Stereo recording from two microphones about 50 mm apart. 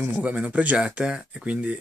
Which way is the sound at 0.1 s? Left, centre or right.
Right.